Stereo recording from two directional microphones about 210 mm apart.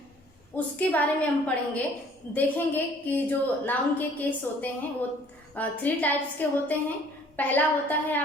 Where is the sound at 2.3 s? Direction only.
10° left (ahead or behind).